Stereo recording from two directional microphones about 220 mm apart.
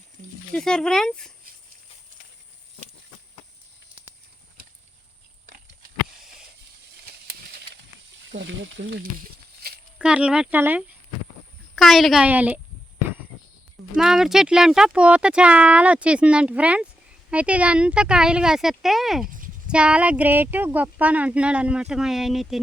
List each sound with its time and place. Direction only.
0.5 s speech: 5° left (ahead or behind)
8.3 s speech: 55° right (ahead or behind)
9.6 s a sound: 45° right (ahead or behind)
10.0 s speech: 5° right (ahead or behind)
13.9 s speech: centre (ahead or behind)